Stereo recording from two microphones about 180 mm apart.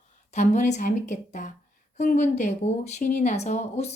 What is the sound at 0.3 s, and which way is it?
A woman's voice, 40° left (ahead or behind).